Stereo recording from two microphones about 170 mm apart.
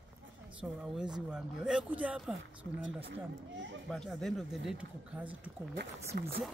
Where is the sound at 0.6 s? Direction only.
5° right (ahead or behind).